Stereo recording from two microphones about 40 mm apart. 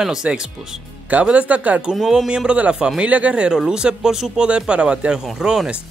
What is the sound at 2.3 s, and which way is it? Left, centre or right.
Speech, right.